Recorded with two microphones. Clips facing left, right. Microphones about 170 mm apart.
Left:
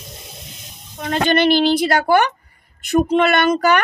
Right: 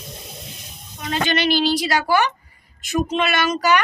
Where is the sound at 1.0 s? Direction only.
50° left (ahead or behind).